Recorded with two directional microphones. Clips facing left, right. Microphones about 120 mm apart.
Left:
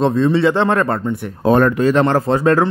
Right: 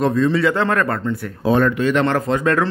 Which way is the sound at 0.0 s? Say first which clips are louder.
Left 3 dB; 30° left (ahead or behind).